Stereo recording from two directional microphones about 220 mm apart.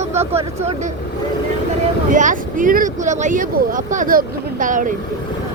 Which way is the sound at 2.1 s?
35° right (ahead or behind).